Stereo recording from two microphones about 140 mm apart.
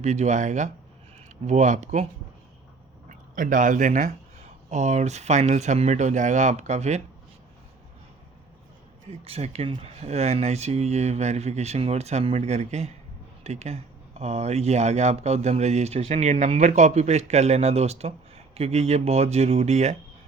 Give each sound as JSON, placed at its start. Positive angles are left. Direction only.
{"t": 0.0, "sound": "speech", "side_deg": -55}
{"t": 3.1, "sound": "speech", "side_deg": -75}
{"t": 9.0, "sound": "speech", "side_deg": -45}